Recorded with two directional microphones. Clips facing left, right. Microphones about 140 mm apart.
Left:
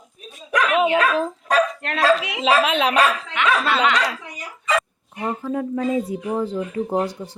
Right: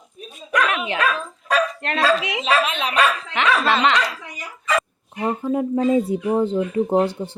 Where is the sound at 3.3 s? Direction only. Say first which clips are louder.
Right 3 dB; 30° right (ahead or behind).